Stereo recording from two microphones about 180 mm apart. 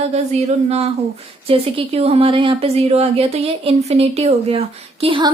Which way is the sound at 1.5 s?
35° right (ahead or behind).